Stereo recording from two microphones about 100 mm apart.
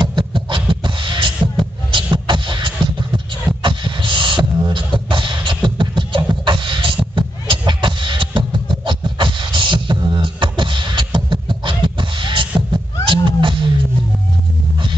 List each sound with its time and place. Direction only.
0.0 s beatboxing: 55° right (ahead or behind)
7.2 s music: 55° right (ahead or behind)